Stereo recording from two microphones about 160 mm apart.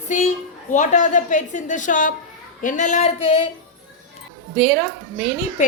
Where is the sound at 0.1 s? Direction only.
50° left (ahead or behind).